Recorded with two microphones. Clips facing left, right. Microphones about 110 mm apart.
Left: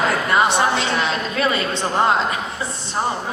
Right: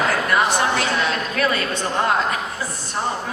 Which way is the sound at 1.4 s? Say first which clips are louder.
Left 2 dB; 25° left (ahead or behind).